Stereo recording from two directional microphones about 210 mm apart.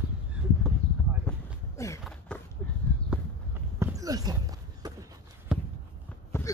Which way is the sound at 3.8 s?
15° right (ahead or behind).